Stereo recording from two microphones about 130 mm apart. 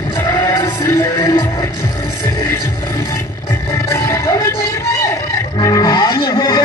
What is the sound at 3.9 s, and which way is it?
Music, 20° left (ahead or behind).